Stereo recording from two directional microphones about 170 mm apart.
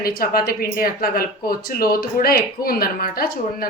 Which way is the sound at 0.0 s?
60° left (ahead or behind).